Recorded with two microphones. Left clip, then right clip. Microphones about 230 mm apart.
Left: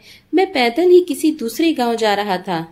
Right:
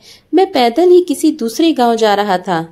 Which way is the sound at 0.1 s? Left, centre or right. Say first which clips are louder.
Right 5 dB; centre.